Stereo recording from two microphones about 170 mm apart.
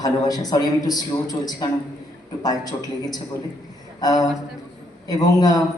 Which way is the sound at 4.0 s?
25° left (ahead or behind).